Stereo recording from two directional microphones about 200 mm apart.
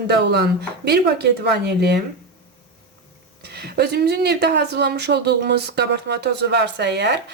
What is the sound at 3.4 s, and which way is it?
Speech, 55° right (ahead or behind).